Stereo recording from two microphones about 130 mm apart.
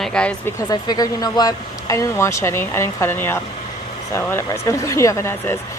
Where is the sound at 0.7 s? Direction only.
30° left (ahead or behind).